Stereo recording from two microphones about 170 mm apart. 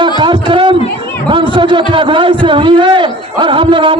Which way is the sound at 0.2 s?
30° right (ahead or behind).